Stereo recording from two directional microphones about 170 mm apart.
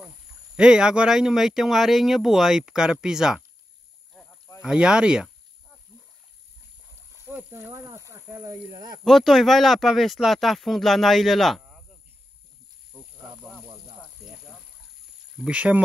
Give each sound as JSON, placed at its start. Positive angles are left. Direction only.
{"t": 0.6, "sound": "speech", "side_deg": -5}
{"t": 4.1, "sound": "rowboat", "side_deg": 5}
{"t": 4.6, "sound": "speech", "side_deg": -5}
{"t": 7.2, "sound": "speech", "side_deg": -15}
{"t": 9.0, "sound": "speech", "side_deg": 0}
{"t": 12.9, "sound": "snake", "side_deg": -20}
{"t": 14.2, "sound": "a sound", "side_deg": 0}
{"t": 15.3, "sound": "speech", "side_deg": -5}